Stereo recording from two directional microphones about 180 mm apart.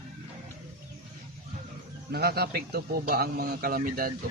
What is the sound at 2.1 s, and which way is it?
A man's voice, 60° right (ahead or behind).